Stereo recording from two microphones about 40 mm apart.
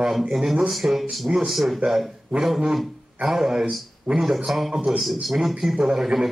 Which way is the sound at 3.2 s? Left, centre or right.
Centre.